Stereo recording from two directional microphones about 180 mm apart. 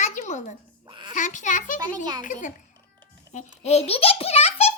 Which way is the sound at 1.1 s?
45° left (ahead or behind).